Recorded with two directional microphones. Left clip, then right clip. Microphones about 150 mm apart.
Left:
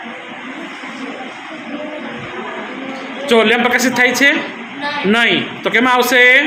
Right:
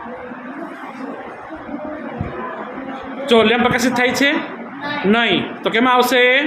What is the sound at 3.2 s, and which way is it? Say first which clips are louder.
A man's voice: left 2 dB; centre (ahead or behind).